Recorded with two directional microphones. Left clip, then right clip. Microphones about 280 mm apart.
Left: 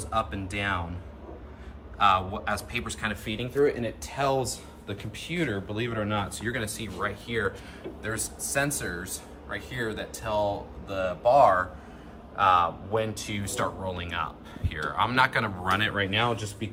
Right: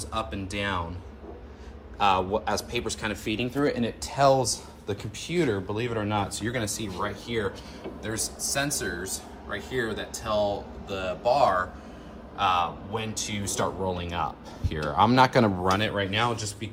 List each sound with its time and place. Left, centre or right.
0.1 s speech: centre
2.0 s speech: centre
4.2 s speech: right
4.5 s speech: centre